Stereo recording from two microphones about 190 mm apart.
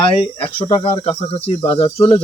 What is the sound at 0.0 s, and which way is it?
Speech, 30° left (ahead or behind).